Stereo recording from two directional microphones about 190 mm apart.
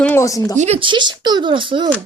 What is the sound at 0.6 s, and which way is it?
Speech, 30° right (ahead or behind).